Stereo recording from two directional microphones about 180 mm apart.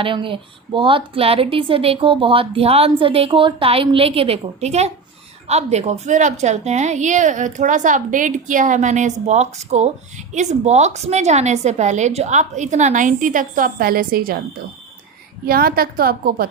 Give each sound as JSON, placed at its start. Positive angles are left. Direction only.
{"t": 0.0, "sound": "a woman's voice", "side_deg": -30}
{"t": 15.4, "sound": "a woman's voice", "side_deg": -55}